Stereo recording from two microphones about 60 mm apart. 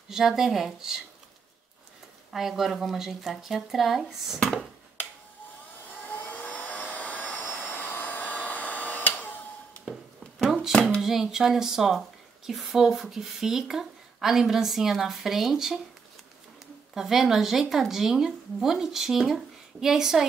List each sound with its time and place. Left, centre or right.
0.1 s speech: centre
2.3 s speech: centre
5.9 s vacuum cleaner: left
7.5 s hair dryer: left
10.4 s hands: centre
10.7 s hands: centre
11.0 s speech: centre
16.9 s speech: centre